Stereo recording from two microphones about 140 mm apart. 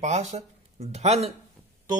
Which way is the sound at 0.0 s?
55° right (ahead or behind).